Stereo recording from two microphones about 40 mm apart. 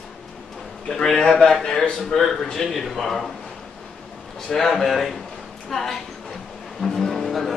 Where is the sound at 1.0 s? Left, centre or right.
Centre.